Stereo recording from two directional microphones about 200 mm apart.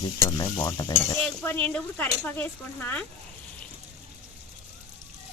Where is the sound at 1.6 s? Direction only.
5° left (ahead or behind).